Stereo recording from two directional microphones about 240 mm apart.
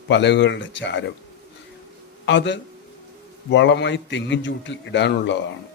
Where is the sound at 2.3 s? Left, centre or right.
Left.